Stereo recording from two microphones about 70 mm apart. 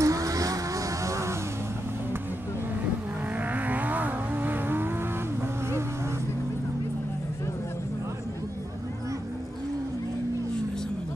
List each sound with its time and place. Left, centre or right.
0.0 s vehicle: right
3.5 s vehicle: right